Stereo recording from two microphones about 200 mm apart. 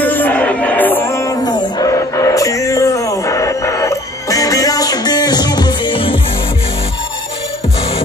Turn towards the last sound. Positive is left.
turn(degrees=25)  # may be behind; listen again after turning